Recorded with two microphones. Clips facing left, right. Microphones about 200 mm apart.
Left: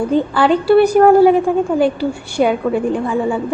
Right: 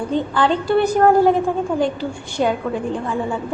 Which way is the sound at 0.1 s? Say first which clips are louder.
Left 3 dB; 10° left (ahead or behind).